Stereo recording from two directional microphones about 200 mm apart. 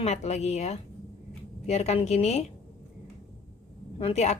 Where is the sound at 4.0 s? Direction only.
30° left (ahead or behind).